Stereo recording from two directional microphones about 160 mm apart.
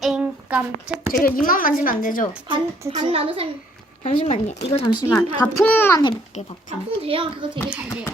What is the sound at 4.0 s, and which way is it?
Speech, 40° left (ahead or behind).